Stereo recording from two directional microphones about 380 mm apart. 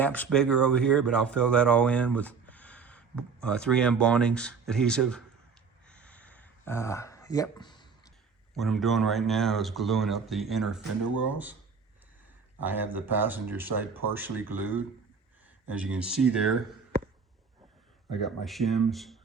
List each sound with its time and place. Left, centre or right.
0.0 s speech: centre
5.8 s a sound: centre
8.5 s speech: centre
12.6 s speech: centre
18.1 s speech: centre